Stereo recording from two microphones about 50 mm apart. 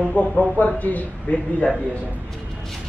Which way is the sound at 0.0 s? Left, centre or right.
Left.